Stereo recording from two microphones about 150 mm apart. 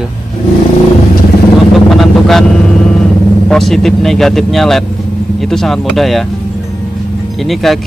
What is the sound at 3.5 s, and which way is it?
Speech, centre (ahead or behind).